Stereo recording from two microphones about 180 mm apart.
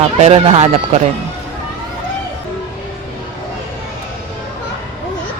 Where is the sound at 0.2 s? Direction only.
35° right (ahead or behind).